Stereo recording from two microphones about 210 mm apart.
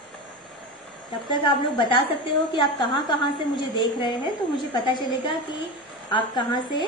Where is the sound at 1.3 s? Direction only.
25° left (ahead or behind).